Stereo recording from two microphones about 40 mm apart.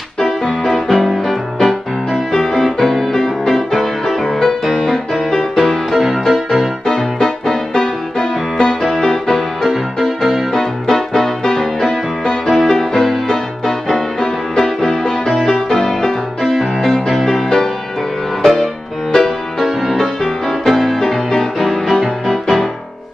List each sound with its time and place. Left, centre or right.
0.2 s music: centre
6.9 s music: centre
9.6 s music: centre
10.6 s music: centre